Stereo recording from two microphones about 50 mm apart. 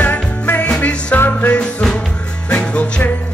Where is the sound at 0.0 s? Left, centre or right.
Left.